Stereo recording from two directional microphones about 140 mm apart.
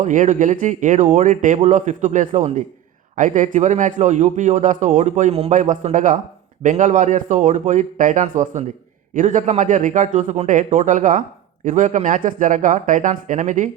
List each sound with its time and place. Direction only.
0.0 s a man's voice: 65° right (ahead or behind)